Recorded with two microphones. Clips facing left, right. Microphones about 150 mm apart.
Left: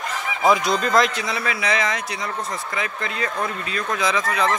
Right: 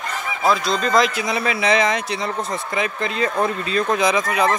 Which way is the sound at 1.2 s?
20° right (ahead or behind).